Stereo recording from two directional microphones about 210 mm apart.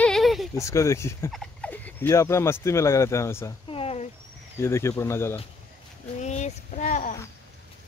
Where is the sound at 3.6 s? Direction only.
30° left (ahead or behind).